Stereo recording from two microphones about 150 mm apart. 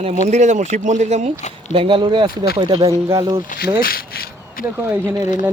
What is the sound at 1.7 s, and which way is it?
Speech, 35° right (ahead or behind).